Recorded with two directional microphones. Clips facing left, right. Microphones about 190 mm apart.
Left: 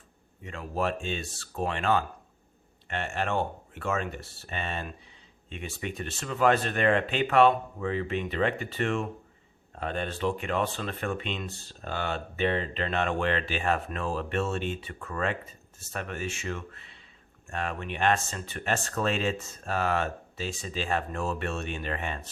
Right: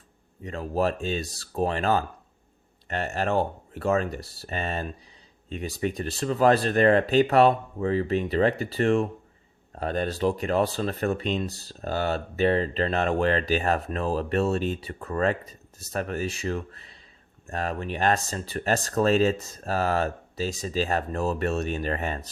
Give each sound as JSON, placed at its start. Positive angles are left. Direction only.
{"t": 0.4, "sound": "speech", "side_deg": -35}